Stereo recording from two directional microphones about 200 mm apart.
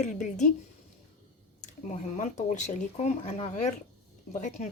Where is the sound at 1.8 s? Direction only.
35° left (ahead or behind).